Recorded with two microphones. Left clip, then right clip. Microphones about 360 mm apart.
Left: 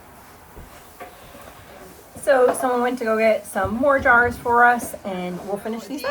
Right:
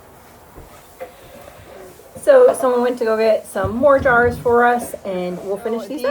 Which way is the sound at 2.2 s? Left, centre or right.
Centre.